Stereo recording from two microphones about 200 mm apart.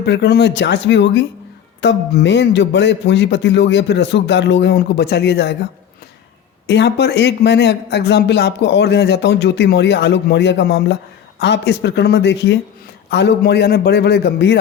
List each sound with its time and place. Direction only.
0.0 s speech: 60° left (ahead or behind)
6.7 s speech: 60° left (ahead or behind)